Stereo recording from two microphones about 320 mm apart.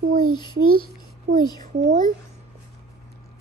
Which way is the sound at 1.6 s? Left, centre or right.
Right.